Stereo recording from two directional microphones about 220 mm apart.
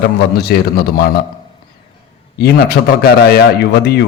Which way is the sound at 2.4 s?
45° left (ahead or behind).